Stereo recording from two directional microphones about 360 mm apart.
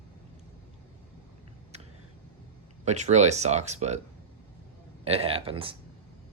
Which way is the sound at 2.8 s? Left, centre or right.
Centre.